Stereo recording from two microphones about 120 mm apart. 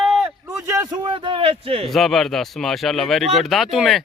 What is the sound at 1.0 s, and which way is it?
Speech, 45° right (ahead or behind).